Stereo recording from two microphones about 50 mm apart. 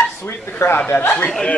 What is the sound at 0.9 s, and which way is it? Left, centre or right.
Speech, left.